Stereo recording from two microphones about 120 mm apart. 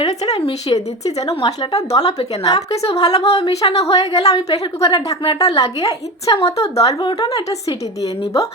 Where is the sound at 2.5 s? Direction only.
60° left (ahead or behind).